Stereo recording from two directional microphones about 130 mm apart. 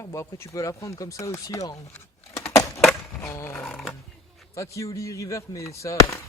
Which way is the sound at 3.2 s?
20° left (ahead or behind).